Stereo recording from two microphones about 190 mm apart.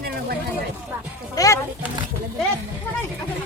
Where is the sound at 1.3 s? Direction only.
20° left (ahead or behind).